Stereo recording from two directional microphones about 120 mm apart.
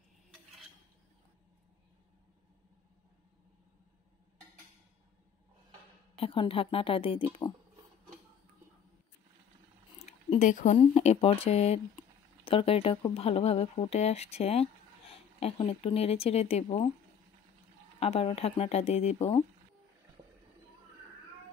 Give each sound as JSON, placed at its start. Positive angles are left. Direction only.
{"t": 6.1, "sound": "a woman's voice", "side_deg": 45}
{"t": 9.9, "sound": "a sound", "side_deg": 75}
{"t": 10.8, "sound": "a woman's voice", "side_deg": 65}
{"t": 17.9, "sound": "speech", "side_deg": 55}